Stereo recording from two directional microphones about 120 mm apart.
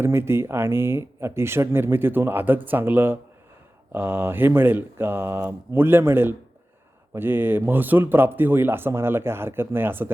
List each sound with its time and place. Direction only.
0.0 s a man's voice: 20° right (ahead or behind)